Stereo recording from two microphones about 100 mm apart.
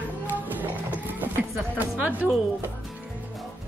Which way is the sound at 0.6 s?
20° right (ahead or behind).